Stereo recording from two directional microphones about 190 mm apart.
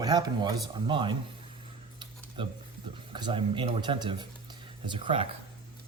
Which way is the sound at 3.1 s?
25° right (ahead or behind).